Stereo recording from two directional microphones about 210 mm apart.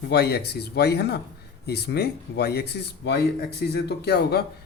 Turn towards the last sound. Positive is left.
turn(degrees=50)  # may be behind; listen again after turning